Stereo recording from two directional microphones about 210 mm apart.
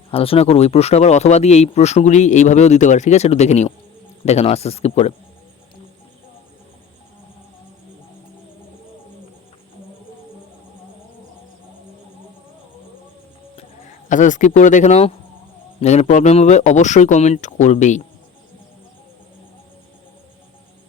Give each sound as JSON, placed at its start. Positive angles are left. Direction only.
{"t": 0.1, "sound": "speech", "side_deg": 25}
{"t": 13.6, "sound": "speech", "side_deg": 35}